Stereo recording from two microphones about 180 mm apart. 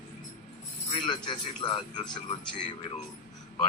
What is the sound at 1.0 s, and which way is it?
Speech, 25° left (ahead or behind).